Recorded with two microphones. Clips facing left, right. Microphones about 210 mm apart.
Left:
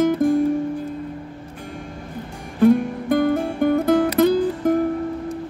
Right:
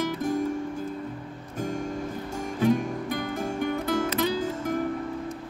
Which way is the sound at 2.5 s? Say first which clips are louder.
Left 8 dB; 45° left (ahead or behind).